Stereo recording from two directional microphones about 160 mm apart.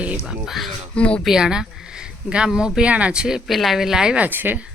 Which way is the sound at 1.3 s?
5° right (ahead or behind).